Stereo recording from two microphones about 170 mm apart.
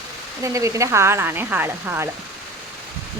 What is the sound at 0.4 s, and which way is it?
Speech, 20° right (ahead or behind).